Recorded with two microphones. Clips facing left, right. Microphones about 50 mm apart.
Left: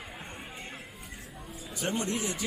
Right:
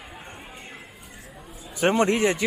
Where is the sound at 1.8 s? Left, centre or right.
Right.